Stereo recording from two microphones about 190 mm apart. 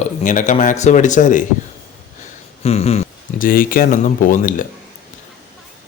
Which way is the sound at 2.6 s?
35° left (ahead or behind).